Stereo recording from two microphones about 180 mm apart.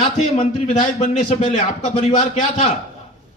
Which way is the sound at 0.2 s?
40° left (ahead or behind).